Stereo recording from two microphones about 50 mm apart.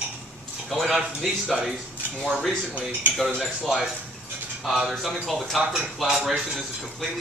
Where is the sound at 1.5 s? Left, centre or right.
Centre.